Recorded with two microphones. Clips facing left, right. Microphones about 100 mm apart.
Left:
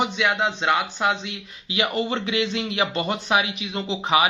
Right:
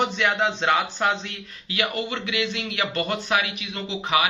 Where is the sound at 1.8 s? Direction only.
30° left (ahead or behind).